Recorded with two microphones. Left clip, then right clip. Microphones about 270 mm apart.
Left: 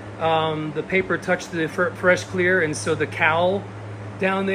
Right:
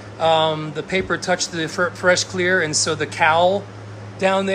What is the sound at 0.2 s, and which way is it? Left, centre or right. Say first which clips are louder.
Speech: right 4 dB; centre.